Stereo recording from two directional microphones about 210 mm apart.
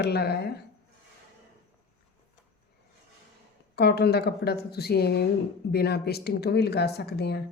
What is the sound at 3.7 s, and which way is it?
Speech, 50° left (ahead or behind).